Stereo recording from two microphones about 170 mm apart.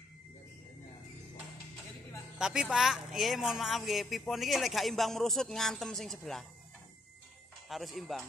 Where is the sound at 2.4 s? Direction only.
5° right (ahead or behind).